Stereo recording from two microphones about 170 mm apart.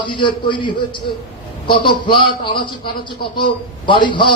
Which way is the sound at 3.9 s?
30° left (ahead or behind).